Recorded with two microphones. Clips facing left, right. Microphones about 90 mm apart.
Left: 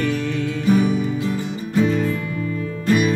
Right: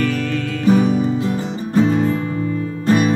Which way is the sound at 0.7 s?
35° right (ahead or behind).